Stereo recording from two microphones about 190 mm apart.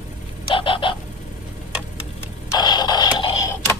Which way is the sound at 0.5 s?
25° left (ahead or behind).